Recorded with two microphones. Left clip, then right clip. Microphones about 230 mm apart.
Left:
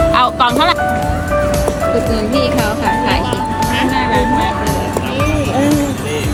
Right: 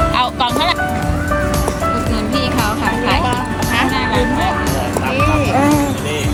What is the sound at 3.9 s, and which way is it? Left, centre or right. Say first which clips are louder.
Music: left 3 dB; right.